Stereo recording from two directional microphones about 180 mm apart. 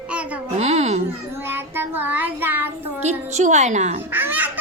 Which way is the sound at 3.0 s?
40° right (ahead or behind).